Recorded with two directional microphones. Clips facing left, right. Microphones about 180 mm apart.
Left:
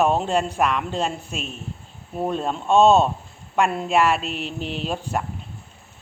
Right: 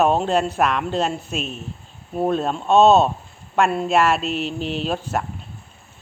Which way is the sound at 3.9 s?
15° left (ahead or behind).